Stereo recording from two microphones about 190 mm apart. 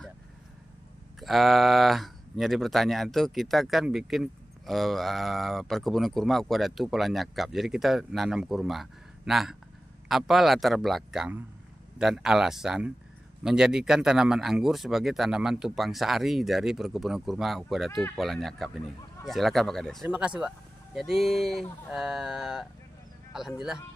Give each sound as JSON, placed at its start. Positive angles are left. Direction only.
{"t": 1.2, "sound": "speech", "side_deg": 0}